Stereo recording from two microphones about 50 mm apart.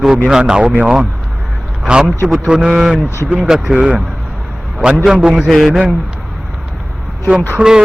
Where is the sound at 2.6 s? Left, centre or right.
Centre.